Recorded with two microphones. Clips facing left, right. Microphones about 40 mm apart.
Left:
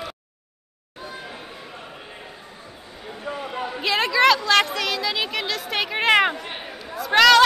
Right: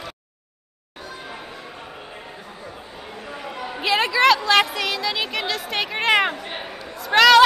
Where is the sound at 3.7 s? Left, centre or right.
Centre.